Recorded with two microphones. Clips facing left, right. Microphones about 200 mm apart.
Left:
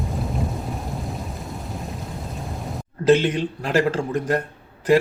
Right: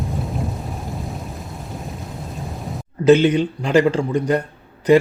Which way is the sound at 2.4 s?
Centre (ahead or behind).